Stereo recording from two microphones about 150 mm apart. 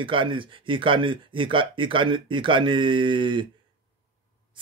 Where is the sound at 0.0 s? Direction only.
35° right (ahead or behind).